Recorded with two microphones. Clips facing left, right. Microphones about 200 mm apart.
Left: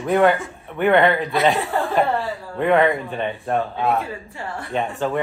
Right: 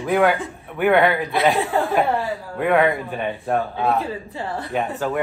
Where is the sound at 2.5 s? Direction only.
Centre (ahead or behind).